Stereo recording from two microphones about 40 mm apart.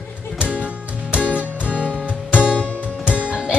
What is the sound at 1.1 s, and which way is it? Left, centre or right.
Music, right.